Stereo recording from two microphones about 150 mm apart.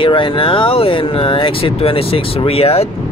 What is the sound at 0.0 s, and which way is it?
Speech, 35° left (ahead or behind).